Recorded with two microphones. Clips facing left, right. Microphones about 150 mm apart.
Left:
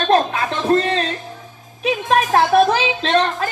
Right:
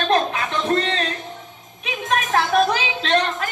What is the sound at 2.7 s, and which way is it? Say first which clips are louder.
Music: left 3 dB; 30° left (ahead or behind).